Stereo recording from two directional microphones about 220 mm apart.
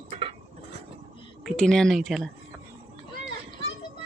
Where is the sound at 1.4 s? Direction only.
5° left (ahead or behind).